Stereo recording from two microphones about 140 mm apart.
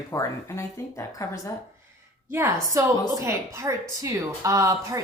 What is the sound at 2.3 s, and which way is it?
A woman's voice, 20° right (ahead or behind).